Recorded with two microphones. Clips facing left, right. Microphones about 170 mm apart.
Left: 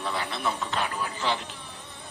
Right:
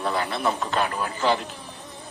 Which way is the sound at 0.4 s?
50° right (ahead or behind).